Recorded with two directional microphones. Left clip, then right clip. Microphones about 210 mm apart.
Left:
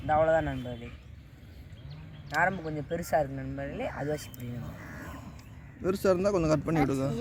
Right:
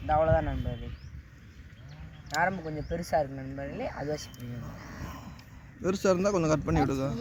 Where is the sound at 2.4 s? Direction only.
5° left (ahead or behind).